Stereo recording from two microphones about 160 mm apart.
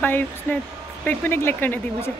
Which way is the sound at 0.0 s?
10° left (ahead or behind).